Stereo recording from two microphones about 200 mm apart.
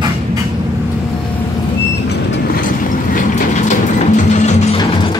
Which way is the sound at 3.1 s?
40° left (ahead or behind).